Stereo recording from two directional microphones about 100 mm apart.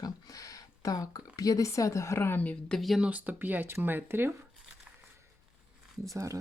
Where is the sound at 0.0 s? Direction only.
35° left (ahead or behind); by 3.1 s centre (ahead or behind).